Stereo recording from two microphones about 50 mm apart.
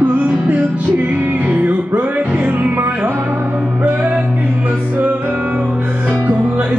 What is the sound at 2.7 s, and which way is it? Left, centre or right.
Music, right.